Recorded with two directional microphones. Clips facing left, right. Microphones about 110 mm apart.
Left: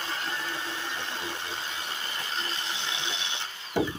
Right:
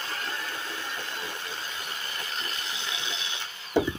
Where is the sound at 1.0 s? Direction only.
25° left (ahead or behind).